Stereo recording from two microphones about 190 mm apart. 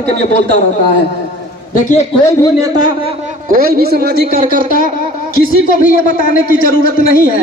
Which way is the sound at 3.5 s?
50° right (ahead or behind).